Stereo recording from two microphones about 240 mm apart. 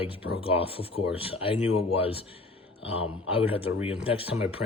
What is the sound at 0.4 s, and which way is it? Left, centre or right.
Speech, left.